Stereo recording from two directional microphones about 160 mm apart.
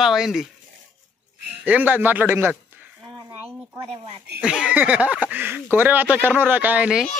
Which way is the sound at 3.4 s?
15° right (ahead or behind).